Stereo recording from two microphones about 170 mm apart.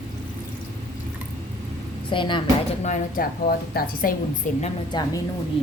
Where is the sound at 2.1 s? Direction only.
30° left (ahead or behind).